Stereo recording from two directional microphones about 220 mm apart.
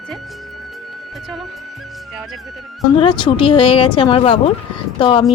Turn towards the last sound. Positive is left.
turn(degrees=20)  # may be behind; listen again after turning